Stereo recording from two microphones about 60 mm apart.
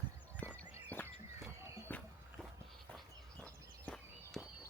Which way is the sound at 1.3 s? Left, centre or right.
Right.